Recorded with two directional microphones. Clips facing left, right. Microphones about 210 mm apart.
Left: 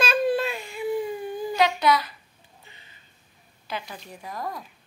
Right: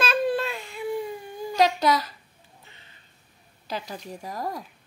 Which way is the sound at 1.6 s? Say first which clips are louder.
Right 1 dB; 40° right (ahead or behind).